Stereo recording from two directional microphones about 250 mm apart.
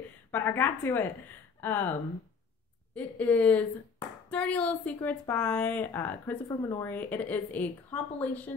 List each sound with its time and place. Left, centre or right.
0.3 s a woman's voice: centre